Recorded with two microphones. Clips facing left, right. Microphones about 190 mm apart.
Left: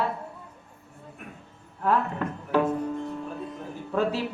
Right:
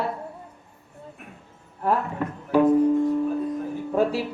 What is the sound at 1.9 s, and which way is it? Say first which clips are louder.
Speech: right 1 dB; 10° right (ahead or behind).